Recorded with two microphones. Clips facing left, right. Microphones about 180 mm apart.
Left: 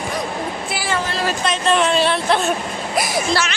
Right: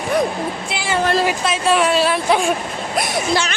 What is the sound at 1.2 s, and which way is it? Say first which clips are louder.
Speech: right 1 dB; 10° right (ahead or behind).